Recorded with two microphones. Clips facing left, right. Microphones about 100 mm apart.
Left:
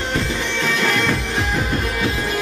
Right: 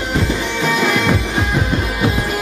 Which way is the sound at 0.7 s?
10° right (ahead or behind).